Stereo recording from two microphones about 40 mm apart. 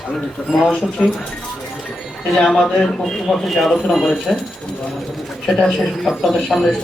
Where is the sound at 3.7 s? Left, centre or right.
Centre.